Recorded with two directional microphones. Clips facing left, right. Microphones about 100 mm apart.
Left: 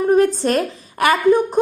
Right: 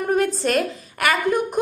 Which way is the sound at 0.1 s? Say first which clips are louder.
Left 4 dB; 35° left (ahead or behind).